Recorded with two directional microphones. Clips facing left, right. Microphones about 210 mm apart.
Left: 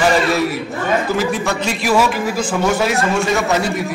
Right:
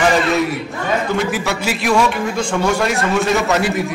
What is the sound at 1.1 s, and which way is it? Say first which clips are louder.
A man's voice: left 1 dB; centre (ahead or behind).